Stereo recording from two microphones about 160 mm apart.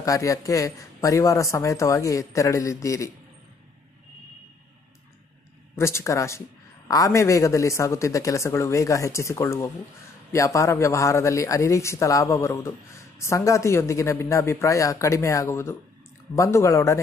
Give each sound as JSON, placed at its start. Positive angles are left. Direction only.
{"t": 0.0, "sound": "speech", "side_deg": 20}
{"t": 5.8, "sound": "speech", "side_deg": 15}